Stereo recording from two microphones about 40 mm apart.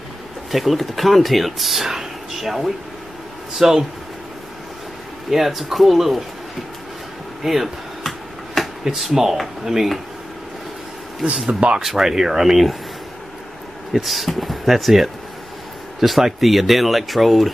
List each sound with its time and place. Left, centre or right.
0.5 s speech: centre
3.6 s speech: centre
5.3 s speech: centre
7.4 s speech: centre
8.8 s speech: centre
11.8 s speech: centre
13.9 s speech: centre